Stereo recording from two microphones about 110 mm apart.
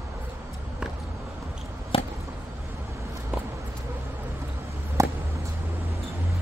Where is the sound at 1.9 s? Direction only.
55° left (ahead or behind).